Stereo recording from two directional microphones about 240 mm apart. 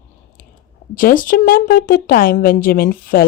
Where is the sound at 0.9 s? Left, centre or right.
Left.